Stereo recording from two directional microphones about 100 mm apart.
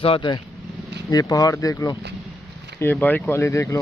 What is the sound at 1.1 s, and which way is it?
Speech, 40° left (ahead or behind).